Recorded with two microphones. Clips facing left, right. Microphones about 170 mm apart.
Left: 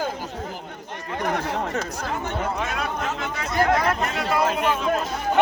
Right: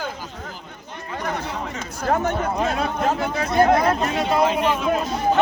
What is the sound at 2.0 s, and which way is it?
Speech, 40° right (ahead or behind).